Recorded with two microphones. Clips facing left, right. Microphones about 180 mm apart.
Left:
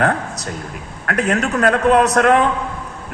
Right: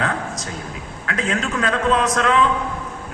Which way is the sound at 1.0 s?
65° left (ahead or behind).